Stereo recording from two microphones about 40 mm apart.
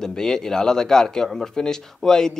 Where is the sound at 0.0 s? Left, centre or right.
Centre.